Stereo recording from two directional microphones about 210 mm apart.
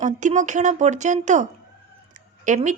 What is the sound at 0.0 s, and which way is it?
A woman's voice, 35° right (ahead or behind).